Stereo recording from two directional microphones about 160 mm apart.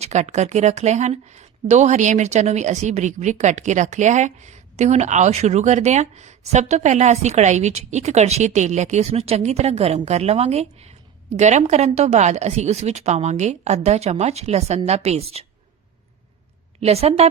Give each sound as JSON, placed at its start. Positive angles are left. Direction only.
{"t": 0.0, "sound": "a woman's voice", "side_deg": -45}
{"t": 16.8, "sound": "a woman's voice", "side_deg": -40}